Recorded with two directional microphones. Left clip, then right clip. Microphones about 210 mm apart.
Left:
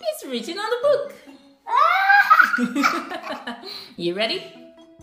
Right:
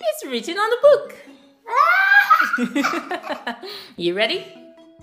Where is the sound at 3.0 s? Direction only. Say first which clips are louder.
Right 4 dB; 10° right (ahead or behind).